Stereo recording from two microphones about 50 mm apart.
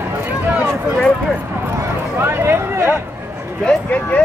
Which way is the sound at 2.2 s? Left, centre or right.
Right.